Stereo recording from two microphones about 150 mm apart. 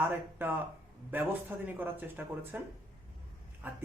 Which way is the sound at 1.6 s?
15° right (ahead or behind).